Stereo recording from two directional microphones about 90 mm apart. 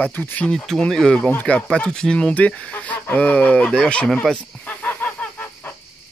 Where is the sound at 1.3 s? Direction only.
15° left (ahead or behind).